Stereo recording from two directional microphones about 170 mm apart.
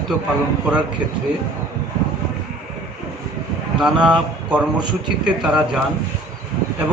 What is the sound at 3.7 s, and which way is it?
Speech, 5° right (ahead or behind).